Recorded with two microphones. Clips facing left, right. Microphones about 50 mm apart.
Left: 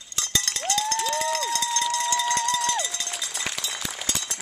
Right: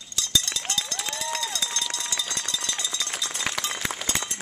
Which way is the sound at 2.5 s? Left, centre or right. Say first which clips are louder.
Left 6 dB; left.